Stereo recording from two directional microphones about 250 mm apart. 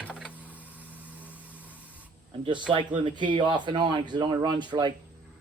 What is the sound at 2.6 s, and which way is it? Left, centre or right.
Speech, centre.